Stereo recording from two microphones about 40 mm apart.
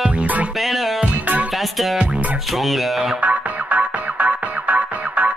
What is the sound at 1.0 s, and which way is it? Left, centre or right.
Music, right.